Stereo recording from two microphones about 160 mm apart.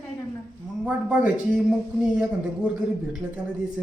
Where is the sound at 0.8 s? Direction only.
10° right (ahead or behind).